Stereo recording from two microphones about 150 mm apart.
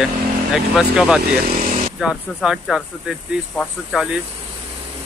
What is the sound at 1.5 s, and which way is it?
Vehicle, 40° right (ahead or behind).